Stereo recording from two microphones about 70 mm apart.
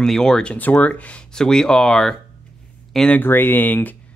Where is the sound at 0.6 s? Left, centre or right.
Left.